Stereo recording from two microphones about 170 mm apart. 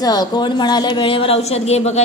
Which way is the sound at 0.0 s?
25° left (ahead or behind).